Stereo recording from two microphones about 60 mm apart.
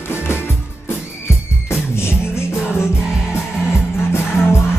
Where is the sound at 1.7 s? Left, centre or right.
Left.